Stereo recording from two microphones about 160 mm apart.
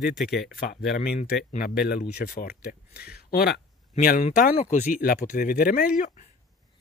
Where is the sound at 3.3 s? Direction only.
80° left.